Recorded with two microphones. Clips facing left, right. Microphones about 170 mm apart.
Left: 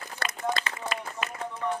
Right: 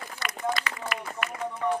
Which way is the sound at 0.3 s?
25° left (ahead or behind).